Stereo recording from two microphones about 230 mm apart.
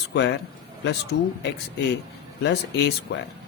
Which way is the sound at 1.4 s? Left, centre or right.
Left.